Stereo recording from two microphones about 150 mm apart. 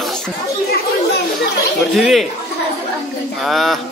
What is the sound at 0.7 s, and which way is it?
Chatter, 90° left.